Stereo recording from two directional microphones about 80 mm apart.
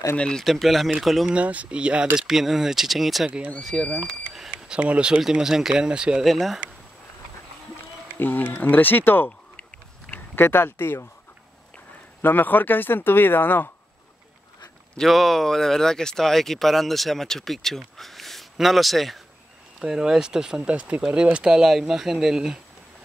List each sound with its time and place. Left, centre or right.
0.1 s speech: centre
0.4 s speech: centre
1.3 s speech: centre
3.3 s speech: centre
3.6 s speech: centre
4.5 s speech: centre
5.2 s speech: centre
6.2 s speech: centre
8.2 s speech: left
12.2 s speech: left
15.0 s speech: centre